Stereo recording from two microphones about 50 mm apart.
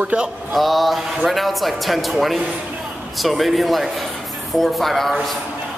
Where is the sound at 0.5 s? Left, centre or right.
Centre.